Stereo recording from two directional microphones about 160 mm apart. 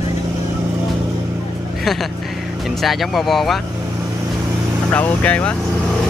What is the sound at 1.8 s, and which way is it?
Speech, centre (ahead or behind).